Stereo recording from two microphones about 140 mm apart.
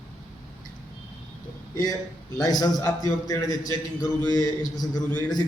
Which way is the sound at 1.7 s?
30° left (ahead or behind).